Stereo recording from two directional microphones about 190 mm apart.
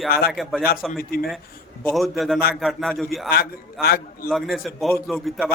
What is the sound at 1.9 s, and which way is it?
A man's voice, centre (ahead or behind).